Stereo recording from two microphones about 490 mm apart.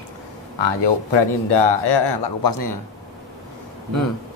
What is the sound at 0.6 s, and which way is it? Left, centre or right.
Speech, left.